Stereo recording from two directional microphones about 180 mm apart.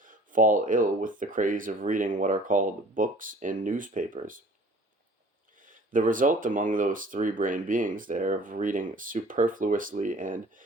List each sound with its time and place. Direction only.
0.0 s speech: 45° right (ahead or behind)
5.5 s speech: 50° right (ahead or behind)